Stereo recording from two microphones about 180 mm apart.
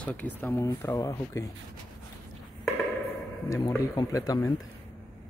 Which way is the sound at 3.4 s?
20° left (ahead or behind).